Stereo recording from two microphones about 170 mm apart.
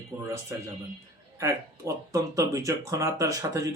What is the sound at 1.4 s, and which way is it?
Speech, 20° right (ahead or behind).